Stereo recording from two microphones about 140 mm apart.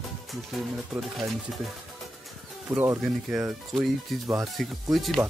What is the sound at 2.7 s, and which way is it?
Speech, 20° right (ahead or behind).